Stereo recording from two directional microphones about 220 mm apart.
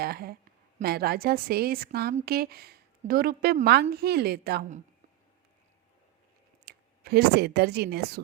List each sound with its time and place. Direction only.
0.0 s a woman's voice: 45° right (ahead or behind)
6.7 s speech: 45° right (ahead or behind)